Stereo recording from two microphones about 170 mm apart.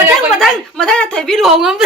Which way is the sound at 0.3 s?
Centre (ahead or behind).